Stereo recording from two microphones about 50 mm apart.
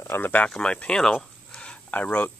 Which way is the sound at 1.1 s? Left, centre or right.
Centre.